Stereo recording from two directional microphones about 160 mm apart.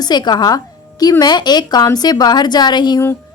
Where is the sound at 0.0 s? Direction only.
25° left (ahead or behind).